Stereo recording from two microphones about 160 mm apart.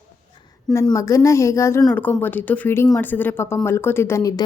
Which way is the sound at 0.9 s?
20° left (ahead or behind).